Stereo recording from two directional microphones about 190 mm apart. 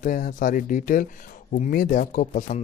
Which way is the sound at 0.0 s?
45° left (ahead or behind).